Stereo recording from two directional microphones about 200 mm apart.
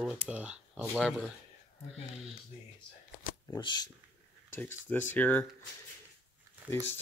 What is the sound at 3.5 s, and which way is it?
Speech, 20° left (ahead or behind).